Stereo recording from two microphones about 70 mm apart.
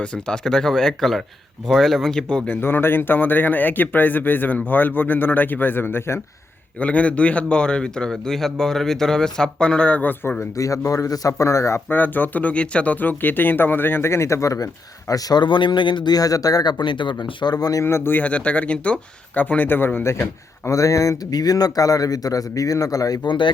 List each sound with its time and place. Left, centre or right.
0.0 s a man's voice: centre
2.5 s speech: left
6.7 s a man's voice: centre
10.6 s speech: left
11.9 s speech: left
16.8 s speech: left
17.8 s speech: left
18.2 s speech: centre; by 20.2 s left
20.7 s a man's voice: left